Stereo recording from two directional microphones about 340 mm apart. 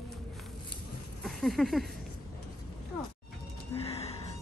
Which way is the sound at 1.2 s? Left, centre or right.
Centre.